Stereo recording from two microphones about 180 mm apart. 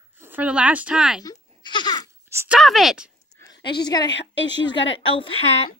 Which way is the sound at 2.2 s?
15° right (ahead or behind).